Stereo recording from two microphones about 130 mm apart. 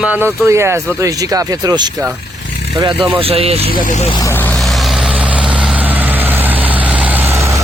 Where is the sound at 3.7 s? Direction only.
90° left.